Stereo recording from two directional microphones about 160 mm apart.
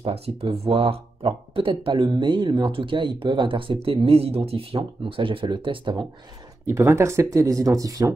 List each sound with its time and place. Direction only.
0.0 s speech: 35° right (ahead or behind)
6.7 s speech: 20° right (ahead or behind)